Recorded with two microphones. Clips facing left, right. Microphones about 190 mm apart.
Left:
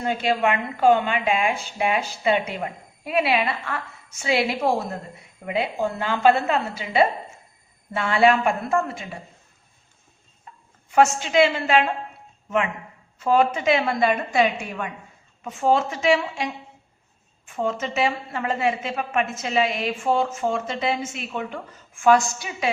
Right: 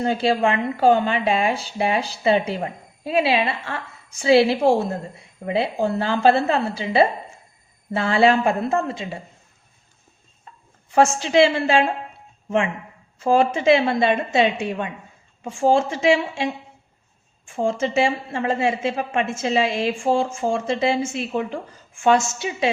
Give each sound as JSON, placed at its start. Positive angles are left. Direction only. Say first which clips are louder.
{"t": 0.0, "sound": "a woman's voice", "louder": "right 3 dB", "side_deg": -30}
{"t": 10.9, "sound": "a woman's voice", "louder": "right 2 dB", "side_deg": -30}
{"t": 13.2, "sound": "a woman's voice", "louder": "right 3 dB", "side_deg": -30}
{"t": 17.6, "sound": "a woman's voice", "louder": "right 4 dB", "side_deg": -30}